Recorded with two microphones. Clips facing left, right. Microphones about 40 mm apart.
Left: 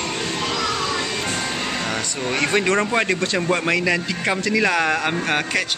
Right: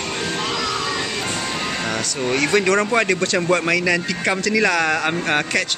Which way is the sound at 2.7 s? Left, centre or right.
Centre.